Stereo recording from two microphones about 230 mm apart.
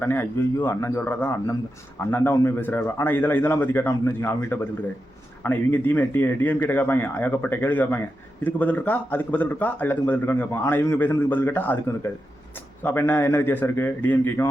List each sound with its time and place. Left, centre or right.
0.0 s a man's voice: centre
12.8 s a man's voice: centre